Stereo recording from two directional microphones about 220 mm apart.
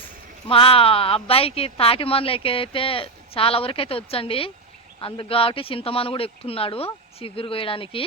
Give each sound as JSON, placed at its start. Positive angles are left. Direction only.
{"t": 0.4, "sound": "speech", "side_deg": 25}